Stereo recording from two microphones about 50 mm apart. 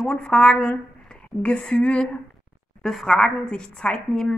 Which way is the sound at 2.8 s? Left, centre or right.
Centre.